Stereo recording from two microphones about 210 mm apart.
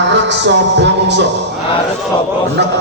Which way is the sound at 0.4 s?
55° right (ahead or behind).